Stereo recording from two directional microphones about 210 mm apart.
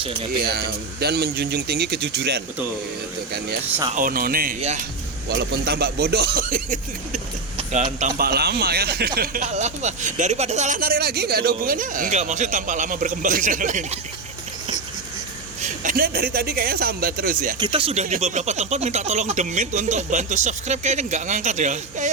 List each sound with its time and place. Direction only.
0.0 s speech: 25° right (ahead or behind)
0.4 s a man's voice: 50° right (ahead or behind)
3.9 s a man's voice: 40° right (ahead or behind)
15.6 s a man's voice: 40° right (ahead or behind)
17.6 s speech: 25° right (ahead or behind)